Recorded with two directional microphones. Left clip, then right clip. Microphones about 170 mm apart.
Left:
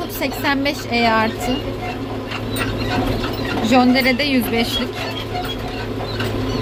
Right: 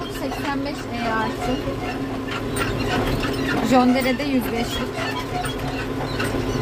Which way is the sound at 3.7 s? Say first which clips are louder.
Left 4 dB; 5° right (ahead or behind).